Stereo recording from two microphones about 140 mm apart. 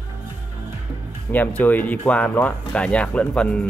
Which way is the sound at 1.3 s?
15° left (ahead or behind).